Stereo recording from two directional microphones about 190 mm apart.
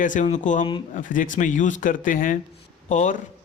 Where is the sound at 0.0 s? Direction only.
40° left (ahead or behind).